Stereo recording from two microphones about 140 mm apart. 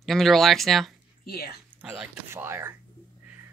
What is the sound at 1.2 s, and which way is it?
Speech, 90° left.